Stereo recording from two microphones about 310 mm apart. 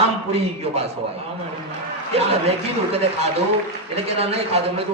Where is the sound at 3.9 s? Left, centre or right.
Centre.